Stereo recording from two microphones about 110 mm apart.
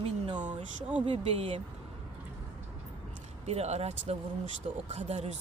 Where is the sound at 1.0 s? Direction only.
60° right (ahead or behind).